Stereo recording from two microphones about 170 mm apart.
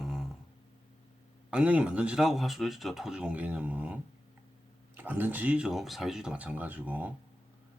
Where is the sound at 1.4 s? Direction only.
5° right (ahead or behind).